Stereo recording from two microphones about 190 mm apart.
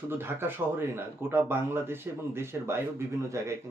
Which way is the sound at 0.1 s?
10° right (ahead or behind).